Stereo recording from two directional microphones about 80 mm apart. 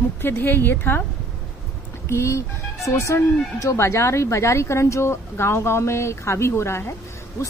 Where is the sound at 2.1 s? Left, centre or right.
Left.